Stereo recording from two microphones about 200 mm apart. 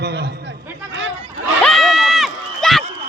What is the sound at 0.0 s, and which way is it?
Chatter, 55° right (ahead or behind).